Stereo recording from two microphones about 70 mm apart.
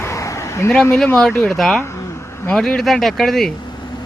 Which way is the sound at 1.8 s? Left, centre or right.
Left.